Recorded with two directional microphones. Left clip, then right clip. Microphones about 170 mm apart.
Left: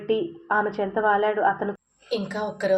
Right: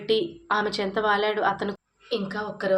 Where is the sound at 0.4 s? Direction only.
10° right (ahead or behind).